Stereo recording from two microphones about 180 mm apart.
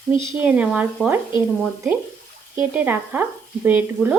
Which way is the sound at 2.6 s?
10° right (ahead or behind).